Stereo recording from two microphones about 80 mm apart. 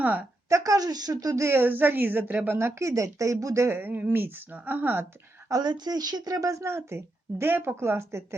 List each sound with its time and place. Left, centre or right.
0.0 s a woman's voice: right
0.4 s speech: right
1.5 s a woman's voice: right
5.5 s a woman's voice: right